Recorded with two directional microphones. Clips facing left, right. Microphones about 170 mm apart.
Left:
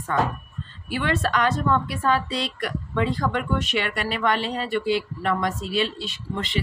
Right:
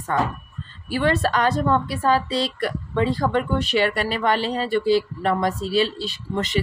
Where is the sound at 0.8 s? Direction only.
35° right (ahead or behind).